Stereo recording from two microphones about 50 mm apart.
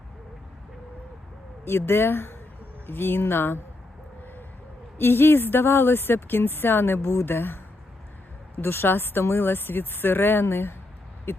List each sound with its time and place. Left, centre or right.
1.6 s speech: left
4.9 s speech: left